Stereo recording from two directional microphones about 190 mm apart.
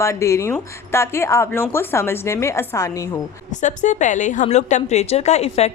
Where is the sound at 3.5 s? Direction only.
40° left (ahead or behind).